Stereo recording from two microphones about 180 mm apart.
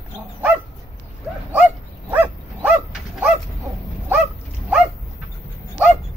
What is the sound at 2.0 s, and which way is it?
Dog, 10° right (ahead or behind).